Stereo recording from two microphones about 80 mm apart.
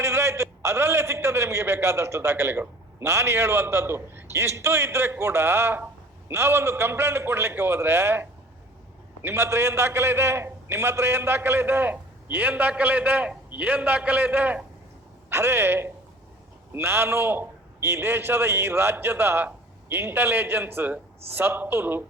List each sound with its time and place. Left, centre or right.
0.0 s a man's voice: right
15.3 s a man's voice: right